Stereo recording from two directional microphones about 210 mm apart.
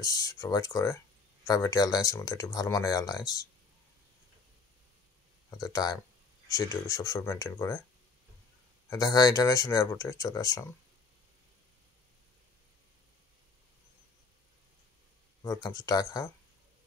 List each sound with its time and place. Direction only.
0.0 s speech: 15° left (ahead or behind)
5.6 s speech: 20° left (ahead or behind)
8.9 s speech: 15° left (ahead or behind)
15.4 s speech: 15° left (ahead or behind)